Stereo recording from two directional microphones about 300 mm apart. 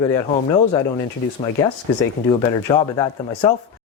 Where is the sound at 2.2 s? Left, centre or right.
Centre.